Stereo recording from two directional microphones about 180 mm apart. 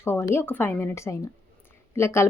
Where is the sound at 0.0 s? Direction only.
15° left (ahead or behind).